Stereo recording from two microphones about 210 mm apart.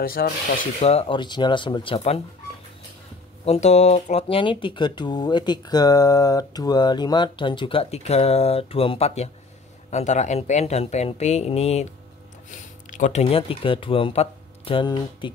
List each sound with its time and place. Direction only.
0.0 s speech: 45° left (ahead or behind)
0.7 s speech: 30° left (ahead or behind)
3.4 s speech: 30° left (ahead or behind)